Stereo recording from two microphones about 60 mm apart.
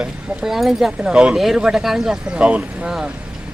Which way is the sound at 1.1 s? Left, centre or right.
Centre.